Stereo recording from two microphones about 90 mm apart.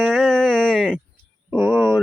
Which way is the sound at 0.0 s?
5° left (ahead or behind).